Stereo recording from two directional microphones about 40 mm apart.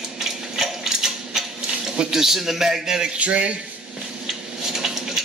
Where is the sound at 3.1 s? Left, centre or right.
Right.